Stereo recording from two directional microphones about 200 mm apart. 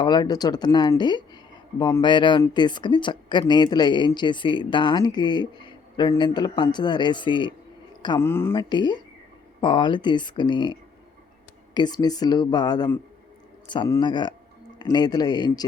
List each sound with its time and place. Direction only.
0.0 s a man's voice: 20° left (ahead or behind)
8.2 s speech: 10° left (ahead or behind)
8.5 s a man's voice: 20° left (ahead or behind)